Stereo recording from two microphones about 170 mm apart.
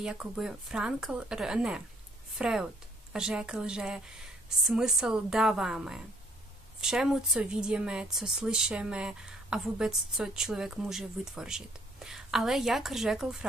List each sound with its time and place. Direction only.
0.0 s speech: 5° right (ahead or behind)